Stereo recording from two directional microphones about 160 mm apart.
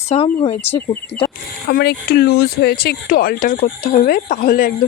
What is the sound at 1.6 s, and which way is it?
Speech, 80° left.